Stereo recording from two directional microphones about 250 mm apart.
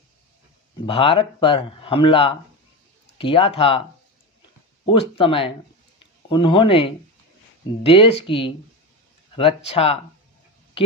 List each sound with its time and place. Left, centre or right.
0.9 s speech: left
4.9 s speech: left